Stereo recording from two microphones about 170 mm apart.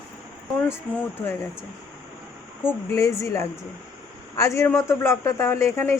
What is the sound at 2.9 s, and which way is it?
A man's voice, 20° left (ahead or behind).